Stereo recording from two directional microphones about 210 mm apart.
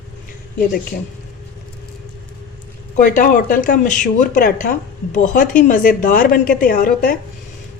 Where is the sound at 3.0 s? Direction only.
40° left (ahead or behind).